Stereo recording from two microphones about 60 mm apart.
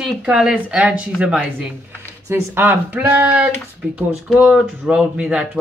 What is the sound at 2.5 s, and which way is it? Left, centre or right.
Speech, right.